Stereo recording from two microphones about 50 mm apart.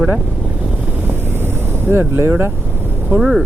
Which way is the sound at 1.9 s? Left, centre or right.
Right.